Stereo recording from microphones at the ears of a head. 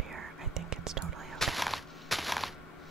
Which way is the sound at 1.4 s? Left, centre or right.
Centre.